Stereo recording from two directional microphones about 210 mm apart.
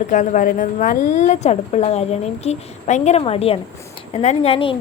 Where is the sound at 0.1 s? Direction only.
35° left (ahead or behind).